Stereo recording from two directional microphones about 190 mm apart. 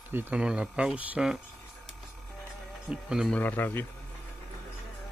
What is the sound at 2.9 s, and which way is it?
Speech, 5° right (ahead or behind).